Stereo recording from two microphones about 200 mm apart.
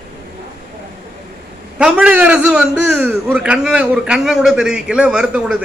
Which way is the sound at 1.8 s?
5° right (ahead or behind).